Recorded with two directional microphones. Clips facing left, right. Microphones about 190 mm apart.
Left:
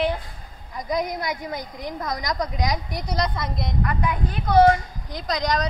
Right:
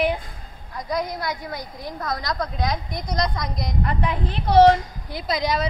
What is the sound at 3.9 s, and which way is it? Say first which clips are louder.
Speech: even; 30° right (ahead or behind).